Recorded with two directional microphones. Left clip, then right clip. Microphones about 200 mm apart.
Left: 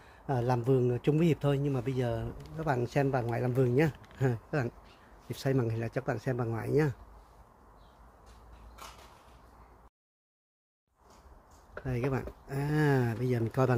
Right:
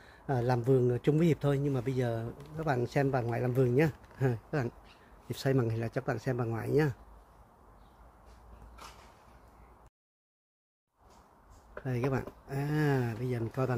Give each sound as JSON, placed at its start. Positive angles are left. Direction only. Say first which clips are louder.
{"t": 0.0, "sound": "a man's voice", "louder": "even", "side_deg": -5}
{"t": 5.3, "sound": "speech", "louder": "right 1 dB", "side_deg": -20}
{"t": 11.8, "sound": "speech", "louder": "even", "side_deg": -15}
{"t": 12.4, "sound": "a sound", "louder": "left 1 dB", "side_deg": 5}
{"t": 12.7, "sound": "speech", "louder": "left 3 dB", "side_deg": 20}